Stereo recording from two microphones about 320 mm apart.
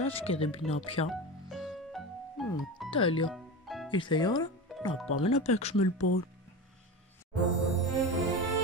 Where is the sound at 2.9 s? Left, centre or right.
Centre.